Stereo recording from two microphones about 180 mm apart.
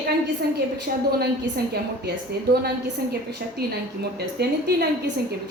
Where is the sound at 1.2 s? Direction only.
60° right (ahead or behind).